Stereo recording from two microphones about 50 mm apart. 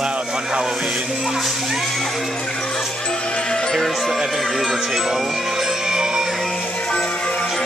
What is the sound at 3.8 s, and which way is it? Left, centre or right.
Speech, centre.